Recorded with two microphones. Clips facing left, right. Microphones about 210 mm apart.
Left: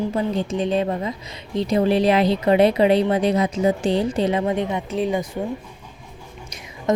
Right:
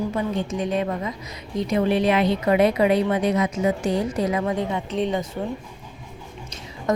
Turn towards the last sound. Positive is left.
turn(degrees=10)  # may be behind; listen again after turning